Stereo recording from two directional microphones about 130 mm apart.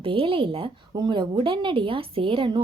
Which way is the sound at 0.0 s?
45° right (ahead or behind).